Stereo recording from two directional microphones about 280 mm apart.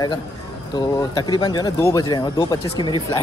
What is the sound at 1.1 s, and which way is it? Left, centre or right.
Speech, centre.